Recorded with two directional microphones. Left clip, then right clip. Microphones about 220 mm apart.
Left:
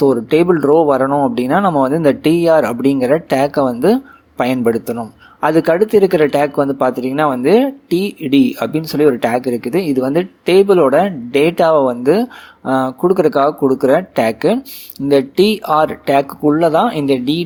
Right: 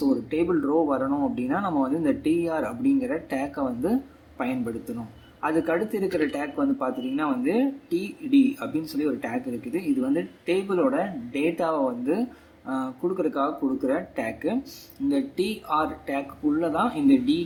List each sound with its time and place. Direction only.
0.3 s speech: 45° left (ahead or behind)